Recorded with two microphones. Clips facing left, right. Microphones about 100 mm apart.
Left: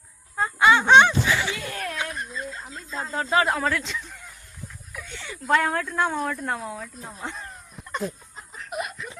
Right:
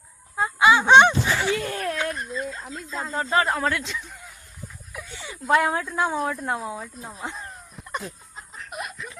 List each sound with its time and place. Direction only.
0.3 s fowl: 5° right (ahead or behind)
1.3 s chuckle: 45° right (ahead or behind)
2.1 s speech: centre (ahead or behind)
4.9 s a sound: 5° right (ahead or behind)
5.5 s speech: 10° right (ahead or behind)
8.5 s chuckle: centre (ahead or behind)